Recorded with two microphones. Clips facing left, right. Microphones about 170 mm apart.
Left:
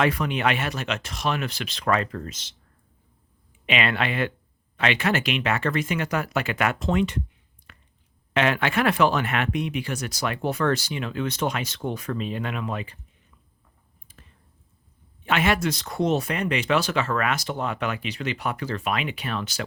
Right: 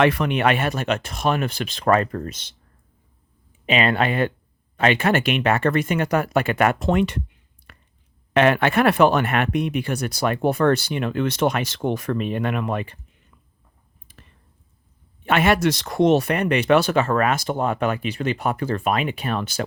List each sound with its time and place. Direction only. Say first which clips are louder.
0.0 s speech: right 5 dB; 70° right (ahead or behind); by 2.5 s 50° right (ahead or behind)
3.7 s speech: right 5 dB; 40° right (ahead or behind); by 7.1 s 60° right (ahead or behind)
7.7 s a sound: right 3 dB; 55° right (ahead or behind)
8.3 s speech: right 6 dB; 55° right (ahead or behind)
15.2 s speech: right 5 dB; 55° right (ahead or behind)